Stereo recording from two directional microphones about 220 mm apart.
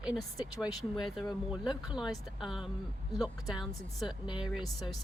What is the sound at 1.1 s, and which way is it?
Speech, centre (ahead or behind).